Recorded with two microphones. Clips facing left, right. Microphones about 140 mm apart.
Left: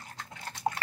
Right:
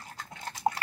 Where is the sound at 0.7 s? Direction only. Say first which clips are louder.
Right 3 dB; 25° right (ahead or behind).